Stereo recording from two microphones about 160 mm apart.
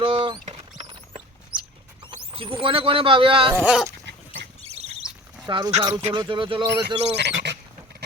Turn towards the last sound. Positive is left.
turn(degrees=-90)